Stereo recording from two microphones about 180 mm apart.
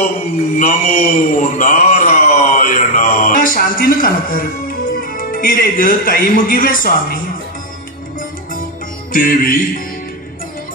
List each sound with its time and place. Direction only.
0.6 s speech: 45° left (ahead or behind)
9.1 s music: 50° left (ahead or behind)